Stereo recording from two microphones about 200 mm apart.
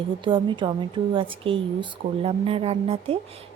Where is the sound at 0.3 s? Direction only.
25° right (ahead or behind).